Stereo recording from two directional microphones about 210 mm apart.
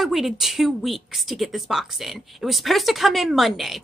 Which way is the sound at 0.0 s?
Centre (ahead or behind).